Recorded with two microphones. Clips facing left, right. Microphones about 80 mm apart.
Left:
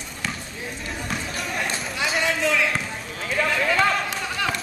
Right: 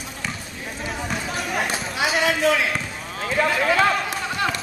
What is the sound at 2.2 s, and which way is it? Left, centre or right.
Basketball bounce, right.